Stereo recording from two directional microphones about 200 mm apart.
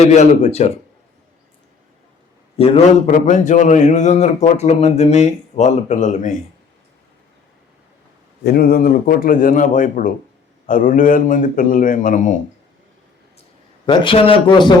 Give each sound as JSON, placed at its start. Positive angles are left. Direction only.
{"t": 0.0, "sound": "a man's voice", "side_deg": 35}
{"t": 2.6, "sound": "a man's voice", "side_deg": 30}
{"t": 8.4, "sound": "a man's voice", "side_deg": 50}
{"t": 13.8, "sound": "speech", "side_deg": 25}